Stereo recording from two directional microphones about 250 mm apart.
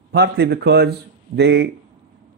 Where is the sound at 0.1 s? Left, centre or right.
Right.